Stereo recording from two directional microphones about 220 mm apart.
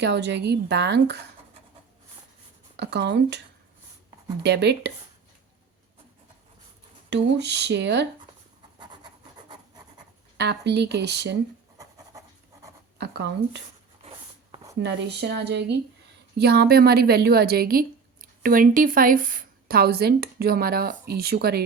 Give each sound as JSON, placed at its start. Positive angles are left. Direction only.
{"t": 0.0, "sound": "a woman's voice", "side_deg": -50}
{"t": 2.7, "sound": "a woman's voice", "side_deg": -50}
{"t": 4.4, "sound": "a woman's voice", "side_deg": -50}
{"t": 7.1, "sound": "a woman's voice", "side_deg": -50}
{"t": 10.3, "sound": "a woman's voice", "side_deg": -50}
{"t": 13.0, "sound": "a woman's voice", "side_deg": -50}
{"t": 14.5, "sound": "a sound", "side_deg": -15}
{"t": 14.8, "sound": "a woman's voice", "side_deg": -50}